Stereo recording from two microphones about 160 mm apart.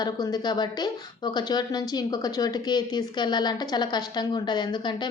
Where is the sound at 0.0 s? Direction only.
25° left (ahead or behind).